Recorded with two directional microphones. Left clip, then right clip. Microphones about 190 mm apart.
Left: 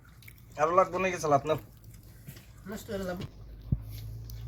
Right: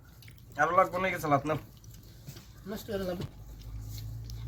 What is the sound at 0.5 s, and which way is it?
Speech, 60° left (ahead or behind).